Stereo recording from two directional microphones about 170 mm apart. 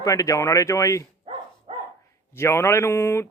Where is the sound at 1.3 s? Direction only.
30° right (ahead or behind).